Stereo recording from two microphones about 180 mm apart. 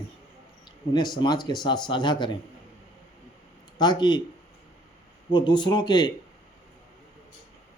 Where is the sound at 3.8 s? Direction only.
25° left (ahead or behind).